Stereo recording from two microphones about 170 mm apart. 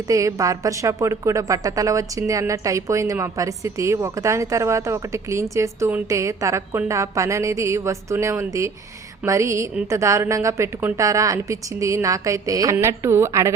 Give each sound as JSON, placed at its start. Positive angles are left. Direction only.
{"t": 0.1, "sound": "a woman's voice", "side_deg": -20}